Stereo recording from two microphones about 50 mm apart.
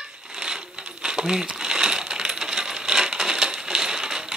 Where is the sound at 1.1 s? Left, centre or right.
Centre.